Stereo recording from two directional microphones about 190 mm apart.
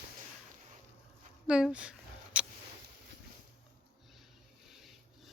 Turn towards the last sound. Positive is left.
turn(degrees=0)  # may be behind; listen again after turning